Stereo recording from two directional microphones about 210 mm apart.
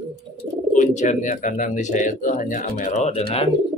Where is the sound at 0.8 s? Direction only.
35° left (ahead or behind).